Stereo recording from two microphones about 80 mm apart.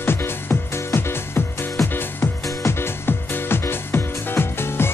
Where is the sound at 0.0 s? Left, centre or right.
Left.